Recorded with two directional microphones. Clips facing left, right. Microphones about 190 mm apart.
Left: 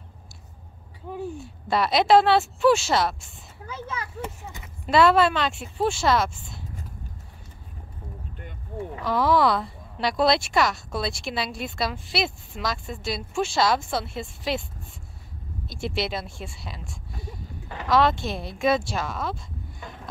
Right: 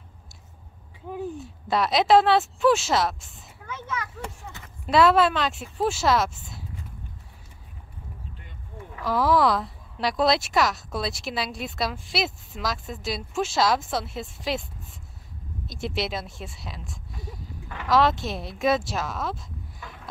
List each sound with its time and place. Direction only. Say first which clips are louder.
1.1 s a woman's voice: even; centre (ahead or behind)
3.6 s speech: right 1 dB; 30° left (ahead or behind)
4.8 s a woman's voice: even; centre (ahead or behind)
9.0 s a woman's voice: even; centre (ahead or behind)
15.6 s a woman's voice: left 1 dB; centre (ahead or behind)